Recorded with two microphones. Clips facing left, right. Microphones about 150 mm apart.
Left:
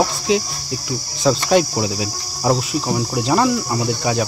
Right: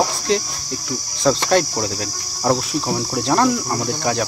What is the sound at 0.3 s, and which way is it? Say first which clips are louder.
Cricket: left 2 dB; 5° left (ahead or behind).